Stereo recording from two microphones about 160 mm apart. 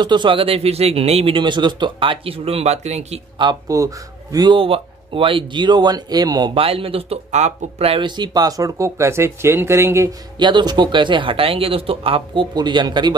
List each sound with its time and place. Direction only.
0.0 s a man's voice: 30° right (ahead or behind)
3.3 s a man's voice: 25° right (ahead or behind)